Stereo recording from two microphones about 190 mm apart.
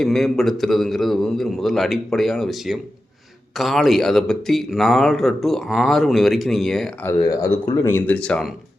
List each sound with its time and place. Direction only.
0.0 s speech: centre (ahead or behind)
7.1 s speech: 15° left (ahead or behind)